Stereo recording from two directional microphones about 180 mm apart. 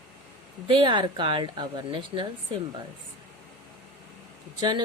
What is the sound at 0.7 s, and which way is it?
Speech, 25° right (ahead or behind).